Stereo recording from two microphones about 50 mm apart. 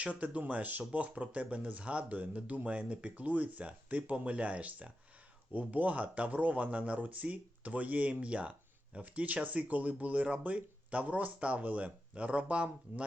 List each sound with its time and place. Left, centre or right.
0.0 s speech: right